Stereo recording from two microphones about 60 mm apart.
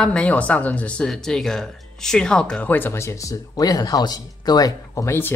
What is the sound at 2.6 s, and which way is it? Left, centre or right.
Speech, left.